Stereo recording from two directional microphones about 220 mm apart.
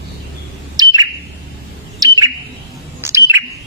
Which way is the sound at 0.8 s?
20° right (ahead or behind).